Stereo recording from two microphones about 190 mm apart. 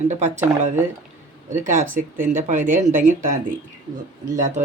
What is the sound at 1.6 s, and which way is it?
Speech, 40° right (ahead or behind).